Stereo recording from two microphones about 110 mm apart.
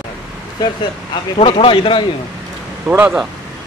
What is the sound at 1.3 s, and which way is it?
Speech, 55° left (ahead or behind).